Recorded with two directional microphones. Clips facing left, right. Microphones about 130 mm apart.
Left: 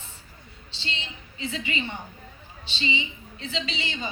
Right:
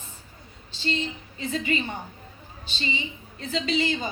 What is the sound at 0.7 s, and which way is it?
A woman's voice, 45° right (ahead or behind).